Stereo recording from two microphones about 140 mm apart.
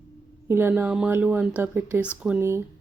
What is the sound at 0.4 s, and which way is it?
Speech, 15° right (ahead or behind).